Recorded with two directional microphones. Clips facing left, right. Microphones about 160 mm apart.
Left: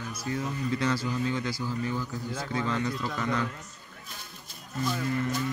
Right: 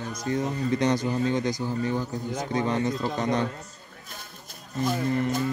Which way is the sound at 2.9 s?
35° right (ahead or behind).